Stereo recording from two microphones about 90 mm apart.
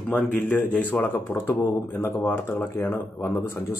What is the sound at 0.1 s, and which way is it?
A man's voice, 15° left (ahead or behind).